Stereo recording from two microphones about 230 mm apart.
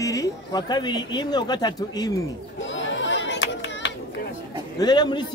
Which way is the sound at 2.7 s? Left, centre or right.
Left.